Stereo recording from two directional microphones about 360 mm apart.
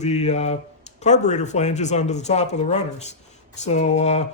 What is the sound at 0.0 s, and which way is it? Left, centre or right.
Speech, centre.